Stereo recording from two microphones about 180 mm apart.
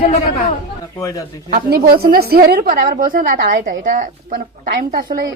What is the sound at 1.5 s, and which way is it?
A woman's voice, 55° right (ahead or behind).